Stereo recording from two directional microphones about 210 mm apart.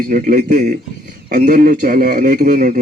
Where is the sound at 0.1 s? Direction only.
40° right (ahead or behind).